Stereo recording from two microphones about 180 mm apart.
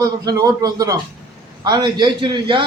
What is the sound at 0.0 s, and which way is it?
A man's voice, 20° right (ahead or behind).